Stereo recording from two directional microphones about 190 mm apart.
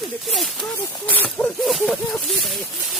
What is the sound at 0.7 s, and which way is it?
Snake, 10° left (ahead or behind).